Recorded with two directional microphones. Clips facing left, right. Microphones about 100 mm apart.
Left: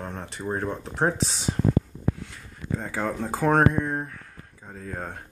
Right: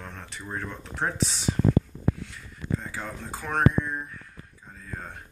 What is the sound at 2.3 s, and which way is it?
Speech, 45° left (ahead or behind).